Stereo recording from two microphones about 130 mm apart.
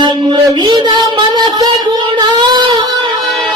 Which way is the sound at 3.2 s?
Centre (ahead or behind).